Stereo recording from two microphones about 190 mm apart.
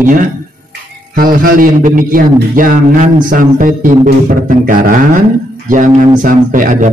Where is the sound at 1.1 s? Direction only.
45° right (ahead or behind).